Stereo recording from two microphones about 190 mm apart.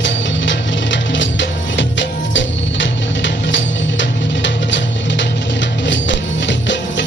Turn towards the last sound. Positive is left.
turn(degrees=70)  # may be behind; listen again after turning